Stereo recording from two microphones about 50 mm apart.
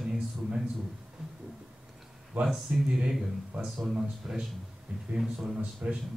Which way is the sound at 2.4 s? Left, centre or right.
Right.